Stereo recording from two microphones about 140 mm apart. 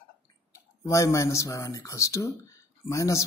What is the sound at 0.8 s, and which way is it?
Speech, 20° left (ahead or behind).